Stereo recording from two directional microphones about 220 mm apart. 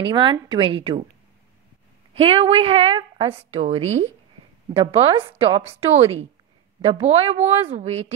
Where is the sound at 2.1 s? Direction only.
25° right (ahead or behind).